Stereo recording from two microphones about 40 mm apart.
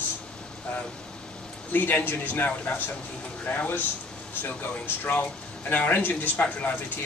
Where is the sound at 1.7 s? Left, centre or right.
Left.